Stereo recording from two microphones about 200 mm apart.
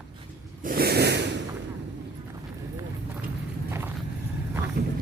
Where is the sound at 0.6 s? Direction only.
50° right (ahead or behind).